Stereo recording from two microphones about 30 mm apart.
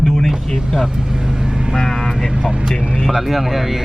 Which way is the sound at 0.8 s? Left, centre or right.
Centre.